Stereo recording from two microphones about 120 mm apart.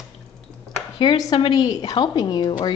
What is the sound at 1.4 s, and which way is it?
A woman's voice, 40° left (ahead or behind).